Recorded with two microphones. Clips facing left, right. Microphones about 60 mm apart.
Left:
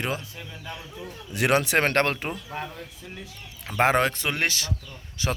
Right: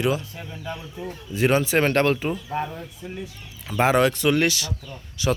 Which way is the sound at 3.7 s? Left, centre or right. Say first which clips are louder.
Right 2 dB; left.